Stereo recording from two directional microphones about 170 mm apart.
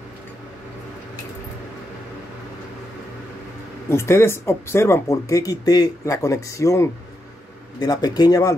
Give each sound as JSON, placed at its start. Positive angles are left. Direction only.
{"t": 3.9, "sound": "speech", "side_deg": 15}